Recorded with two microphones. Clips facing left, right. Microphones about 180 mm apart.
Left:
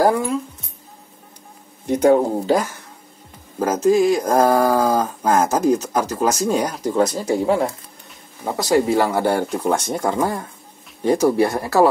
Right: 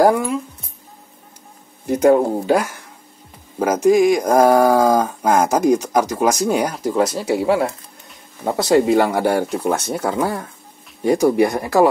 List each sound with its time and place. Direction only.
1.9 s speech: 10° right (ahead or behind)
8.5 s speech: 20° right (ahead or behind)